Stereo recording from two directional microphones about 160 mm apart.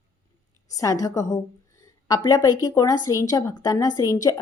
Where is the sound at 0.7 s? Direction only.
20° left (ahead or behind).